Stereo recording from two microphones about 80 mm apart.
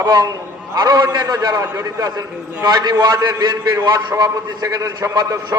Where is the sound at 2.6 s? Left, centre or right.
Right.